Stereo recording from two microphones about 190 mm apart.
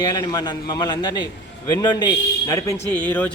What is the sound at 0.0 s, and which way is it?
A man's voice, 20° left (ahead or behind).